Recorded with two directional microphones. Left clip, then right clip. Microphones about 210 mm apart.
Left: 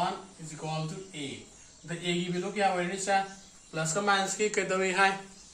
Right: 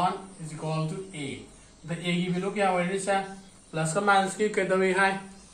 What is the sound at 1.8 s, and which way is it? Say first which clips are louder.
A man's voice: right 2 dB; 5° left (ahead or behind).